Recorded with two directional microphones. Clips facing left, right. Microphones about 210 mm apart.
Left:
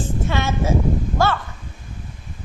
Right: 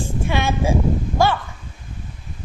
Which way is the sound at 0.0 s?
15° right (ahead or behind).